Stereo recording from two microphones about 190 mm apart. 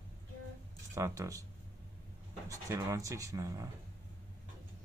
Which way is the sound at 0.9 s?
15° right (ahead or behind).